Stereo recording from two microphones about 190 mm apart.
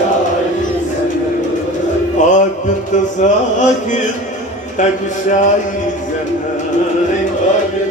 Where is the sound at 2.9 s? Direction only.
40° left (ahead or behind).